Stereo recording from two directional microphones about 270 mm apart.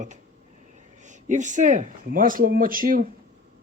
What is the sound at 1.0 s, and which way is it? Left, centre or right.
Speech, right.